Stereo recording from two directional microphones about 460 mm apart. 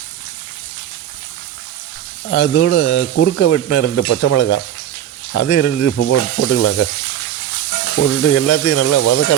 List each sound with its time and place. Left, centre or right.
2.3 s speech: left
8.2 s speech: left